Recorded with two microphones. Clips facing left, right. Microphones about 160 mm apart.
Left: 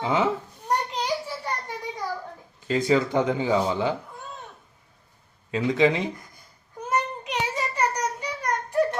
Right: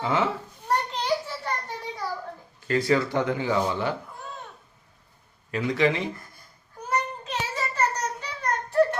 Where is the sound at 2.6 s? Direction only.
20° left (ahead or behind).